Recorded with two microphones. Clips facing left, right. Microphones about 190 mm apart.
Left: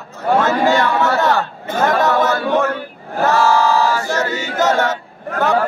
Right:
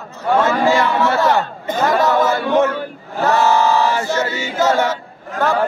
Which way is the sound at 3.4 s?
20° right (ahead or behind).